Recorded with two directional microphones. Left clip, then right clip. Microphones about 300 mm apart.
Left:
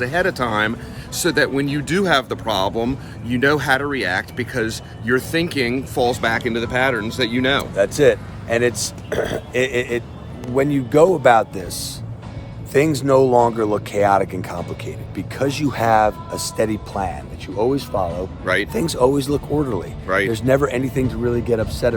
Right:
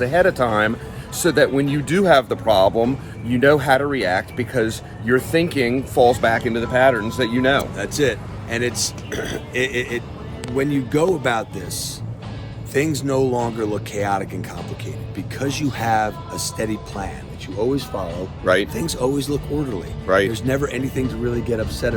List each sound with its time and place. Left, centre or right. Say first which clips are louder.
0.0 s speech: right 3 dB; centre
7.8 s speech: left 6 dB; left
18.4 s speech: right 3 dB; centre
18.7 s speech: left 5 dB; centre
20.1 s speech: right 2 dB; centre
20.3 s speech: left 5 dB; centre